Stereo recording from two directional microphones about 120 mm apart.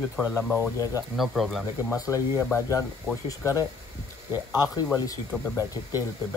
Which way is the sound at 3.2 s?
30° left (ahead or behind).